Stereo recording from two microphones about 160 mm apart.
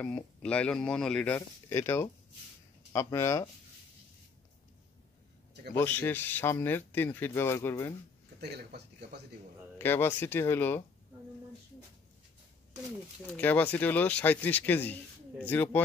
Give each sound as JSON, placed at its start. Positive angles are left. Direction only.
{"t": 0.0, "sound": "speech", "side_deg": 5}
{"t": 5.8, "sound": "speech", "side_deg": 10}
{"t": 8.4, "sound": "speech", "side_deg": -90}
{"t": 9.8, "sound": "speech", "side_deg": 15}
{"t": 13.3, "sound": "speech", "side_deg": 10}